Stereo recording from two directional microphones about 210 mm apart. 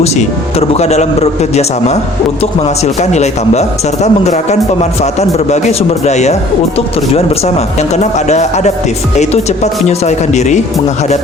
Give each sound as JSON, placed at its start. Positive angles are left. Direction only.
{"t": 0.7, "sound": "a man's voice", "side_deg": 30}
{"t": 9.8, "sound": "a man's voice", "side_deg": 35}